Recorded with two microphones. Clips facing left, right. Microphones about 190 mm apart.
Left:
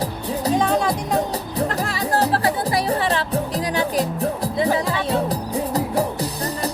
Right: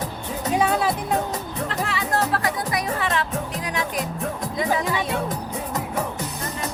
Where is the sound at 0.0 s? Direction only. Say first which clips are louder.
Left 5 dB; 35° left (ahead or behind).